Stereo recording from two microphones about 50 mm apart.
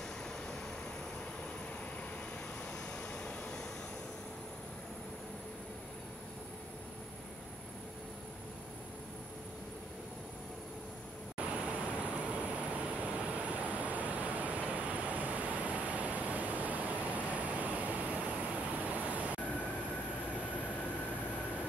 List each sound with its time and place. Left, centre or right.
3.0 s vehicle: centre
11.3 s vehicle: right
18.8 s waves: right